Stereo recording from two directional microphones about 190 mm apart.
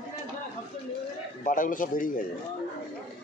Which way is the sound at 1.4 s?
45° left (ahead or behind).